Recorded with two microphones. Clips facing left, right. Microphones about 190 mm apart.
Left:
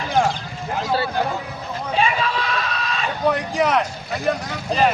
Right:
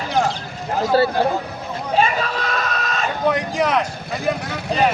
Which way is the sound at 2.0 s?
45° right (ahead or behind).